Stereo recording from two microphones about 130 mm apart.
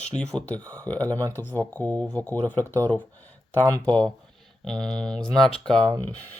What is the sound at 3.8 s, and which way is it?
Speech, 5° left (ahead or behind).